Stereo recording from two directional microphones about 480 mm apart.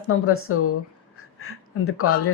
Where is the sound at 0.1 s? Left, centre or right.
Left.